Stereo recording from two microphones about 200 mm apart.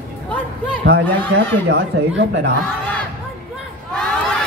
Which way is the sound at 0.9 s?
55° right (ahead or behind).